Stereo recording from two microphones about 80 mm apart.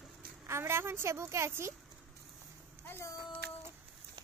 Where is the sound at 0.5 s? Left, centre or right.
Right.